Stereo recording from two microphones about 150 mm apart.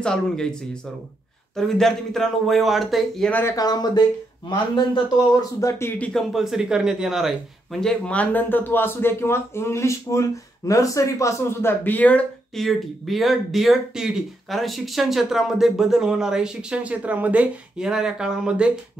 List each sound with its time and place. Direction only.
0.0 s a man's voice: 5° left (ahead or behind)
3.3 s a man's voice: 20° left (ahead or behind)
6.1 s a man's voice: centre (ahead or behind)